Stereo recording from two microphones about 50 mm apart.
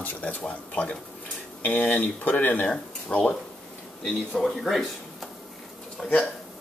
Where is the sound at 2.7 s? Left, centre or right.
Centre.